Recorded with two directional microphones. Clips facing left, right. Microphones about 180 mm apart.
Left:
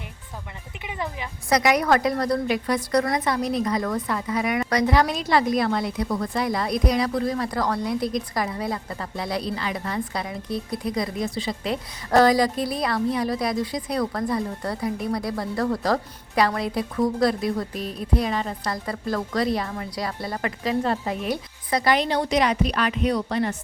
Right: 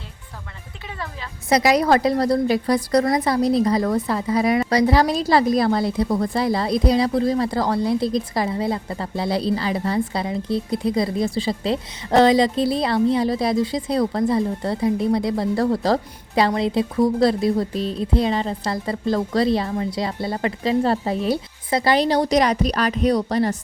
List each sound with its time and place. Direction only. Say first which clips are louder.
0.9 s a woman's voice: left 3 dB; 15° left (ahead or behind)
1.5 s a woman's voice: right 3 dB; 30° right (ahead or behind)